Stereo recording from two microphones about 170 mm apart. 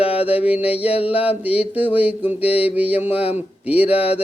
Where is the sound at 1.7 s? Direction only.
10° right (ahead or behind).